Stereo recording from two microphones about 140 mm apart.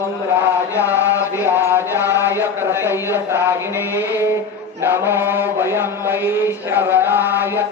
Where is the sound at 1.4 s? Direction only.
15° right (ahead or behind).